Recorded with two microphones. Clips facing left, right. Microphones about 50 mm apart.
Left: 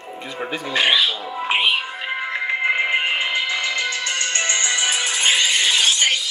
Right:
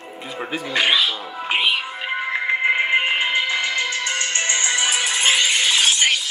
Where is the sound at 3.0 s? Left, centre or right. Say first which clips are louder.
Right 1 dB; right.